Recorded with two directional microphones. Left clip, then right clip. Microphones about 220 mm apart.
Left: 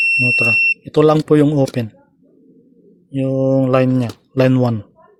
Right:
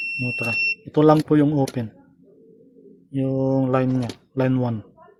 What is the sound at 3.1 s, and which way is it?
Speech, 35° left (ahead or behind).